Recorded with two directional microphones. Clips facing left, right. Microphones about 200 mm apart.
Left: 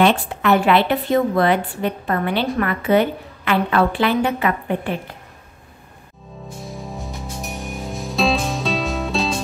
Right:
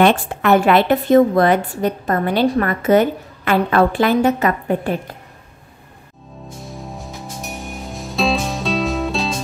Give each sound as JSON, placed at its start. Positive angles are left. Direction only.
{"t": 0.0, "sound": "a woman's voice", "side_deg": -50}
{"t": 6.6, "sound": "music", "side_deg": 0}